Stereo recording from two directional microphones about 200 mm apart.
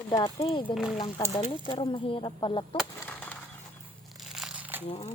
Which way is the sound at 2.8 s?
10° left (ahead or behind).